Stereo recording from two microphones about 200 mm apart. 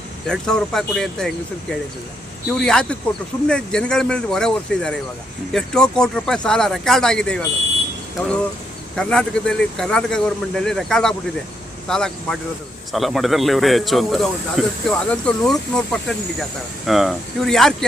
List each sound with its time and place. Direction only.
0.3 s speech: 5° left (ahead or behind)
2.5 s speech: 5° left (ahead or behind)
9.0 s speech: 5° left (ahead or behind)